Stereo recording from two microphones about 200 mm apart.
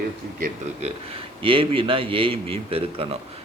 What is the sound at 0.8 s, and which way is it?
Speech, 30° right (ahead or behind).